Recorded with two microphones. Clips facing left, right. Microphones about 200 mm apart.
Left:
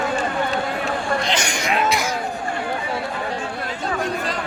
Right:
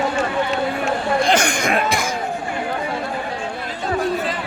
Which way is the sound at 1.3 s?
55° right (ahead or behind).